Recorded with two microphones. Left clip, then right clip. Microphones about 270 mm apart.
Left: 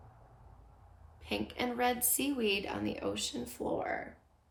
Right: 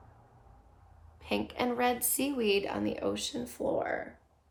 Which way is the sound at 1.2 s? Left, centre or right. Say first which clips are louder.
Right 4 dB; centre.